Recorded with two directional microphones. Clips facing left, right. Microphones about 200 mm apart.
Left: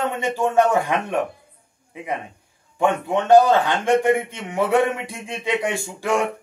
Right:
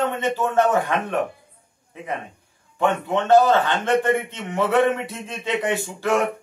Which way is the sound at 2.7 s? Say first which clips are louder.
Left 1 dB; 15° left (ahead or behind).